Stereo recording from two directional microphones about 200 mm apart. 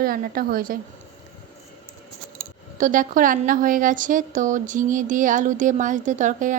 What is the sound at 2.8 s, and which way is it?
A woman's voice, 40° right (ahead or behind).